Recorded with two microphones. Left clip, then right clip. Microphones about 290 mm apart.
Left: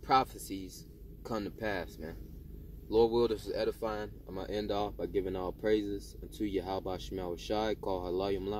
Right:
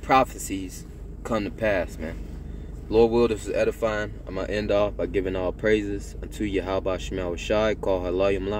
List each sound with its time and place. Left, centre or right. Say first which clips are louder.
0.0 s speech: right 8 dB; centre
2.9 s speech: right 8 dB; centre